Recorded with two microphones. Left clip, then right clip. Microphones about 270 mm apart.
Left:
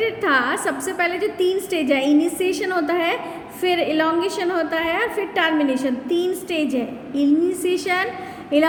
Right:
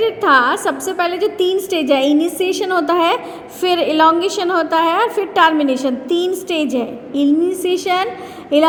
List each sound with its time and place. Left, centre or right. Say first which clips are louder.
0.2 s a woman's voice: right 9 dB; centre